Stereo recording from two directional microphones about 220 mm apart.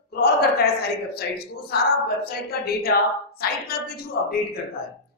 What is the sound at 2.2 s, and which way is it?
A woman's voice, 45° left (ahead or behind).